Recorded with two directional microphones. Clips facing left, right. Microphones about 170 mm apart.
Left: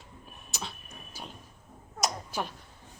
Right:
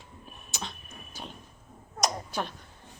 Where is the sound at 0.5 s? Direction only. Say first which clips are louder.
Right 1 dB; 5° left (ahead or behind).